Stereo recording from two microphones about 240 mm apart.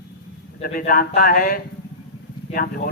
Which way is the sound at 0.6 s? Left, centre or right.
Left.